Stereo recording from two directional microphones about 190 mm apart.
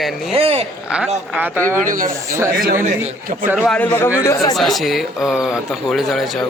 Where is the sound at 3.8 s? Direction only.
10° left (ahead or behind).